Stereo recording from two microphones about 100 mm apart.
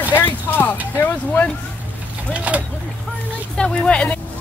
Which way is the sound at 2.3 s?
15° right (ahead or behind).